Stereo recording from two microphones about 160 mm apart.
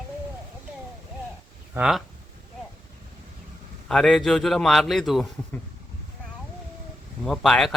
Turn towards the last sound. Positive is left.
turn(degrees=0)  # may be behind; listen again after turning